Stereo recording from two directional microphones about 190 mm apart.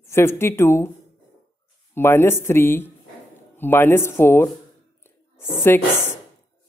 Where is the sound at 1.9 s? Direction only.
10° left (ahead or behind).